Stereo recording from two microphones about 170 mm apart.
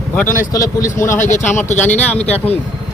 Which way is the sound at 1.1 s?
45° left (ahead or behind).